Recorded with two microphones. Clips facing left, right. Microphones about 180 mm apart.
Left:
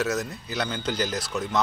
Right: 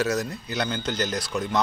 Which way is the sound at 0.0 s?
Centre (ahead or behind).